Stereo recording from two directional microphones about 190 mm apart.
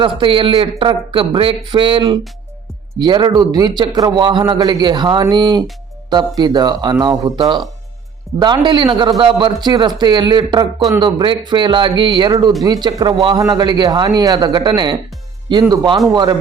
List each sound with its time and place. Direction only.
0.0 s a man's voice: 25° right (ahead or behind)